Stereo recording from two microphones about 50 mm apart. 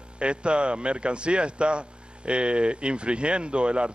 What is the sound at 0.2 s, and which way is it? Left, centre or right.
A man's voice, right.